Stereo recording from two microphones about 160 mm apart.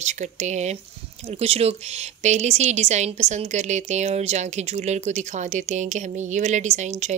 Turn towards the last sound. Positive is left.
turn(degrees=-45)  # may be behind; listen again after turning